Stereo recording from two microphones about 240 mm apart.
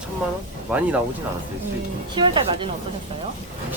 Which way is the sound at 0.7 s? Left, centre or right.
Centre.